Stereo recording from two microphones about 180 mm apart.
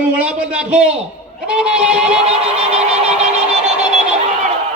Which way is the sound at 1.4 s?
5° right (ahead or behind).